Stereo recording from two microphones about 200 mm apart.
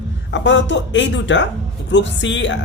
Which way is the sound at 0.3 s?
65° left (ahead or behind).